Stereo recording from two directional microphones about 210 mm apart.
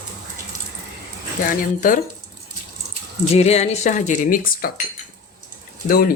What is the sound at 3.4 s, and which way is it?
Speech, 30° left (ahead or behind).